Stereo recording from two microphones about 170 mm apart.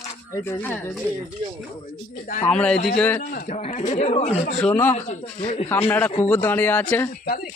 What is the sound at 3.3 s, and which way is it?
Speech, 45° left (ahead or behind).